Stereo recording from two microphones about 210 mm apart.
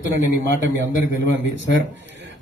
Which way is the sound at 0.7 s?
60° right (ahead or behind).